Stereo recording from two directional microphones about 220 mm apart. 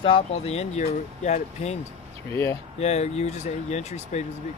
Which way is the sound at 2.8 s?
30° left (ahead or behind).